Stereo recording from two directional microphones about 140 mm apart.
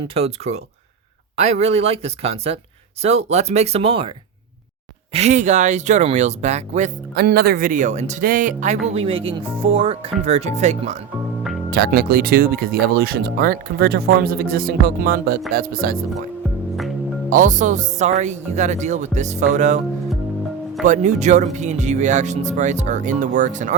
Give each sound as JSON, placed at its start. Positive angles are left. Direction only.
{"t": 0.1, "sound": "speech", "side_deg": -45}
{"t": 5.1, "sound": "speech", "side_deg": -55}
{"t": 7.3, "sound": "speech", "side_deg": -90}
{"t": 8.9, "sound": "a woman's voice", "side_deg": -45}
{"t": 11.9, "sound": "speech", "side_deg": -90}
{"t": 17.2, "sound": "speech", "side_deg": -65}
{"t": 20.8, "sound": "speech", "side_deg": -60}